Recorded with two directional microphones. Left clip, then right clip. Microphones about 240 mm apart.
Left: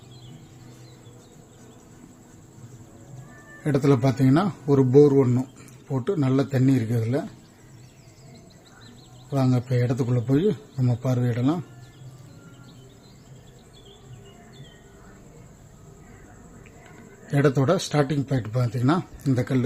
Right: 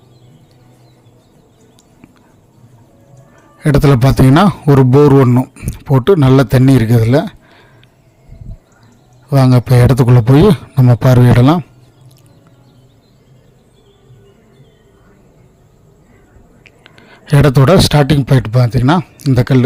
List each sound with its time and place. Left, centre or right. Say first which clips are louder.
3.6 s a man's voice: right 10 dB; right
9.3 s speech: right 13 dB; right
16.6 s speech: right 10 dB; right